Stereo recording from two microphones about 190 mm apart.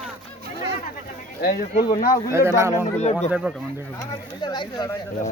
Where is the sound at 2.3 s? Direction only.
15° right (ahead or behind).